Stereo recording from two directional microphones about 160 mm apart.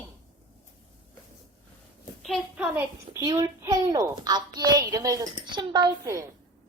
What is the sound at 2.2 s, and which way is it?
Speech, centre (ahead or behind).